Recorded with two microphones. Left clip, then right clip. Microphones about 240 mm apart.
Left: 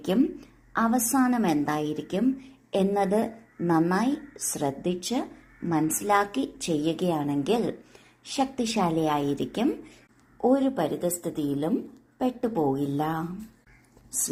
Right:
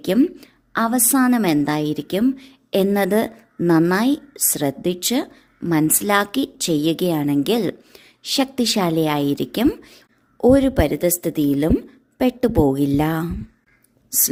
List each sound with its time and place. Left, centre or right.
0.0 s a woman's voice: right